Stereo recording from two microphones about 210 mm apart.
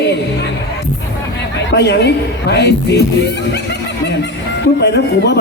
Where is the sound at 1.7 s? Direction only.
55° left (ahead or behind).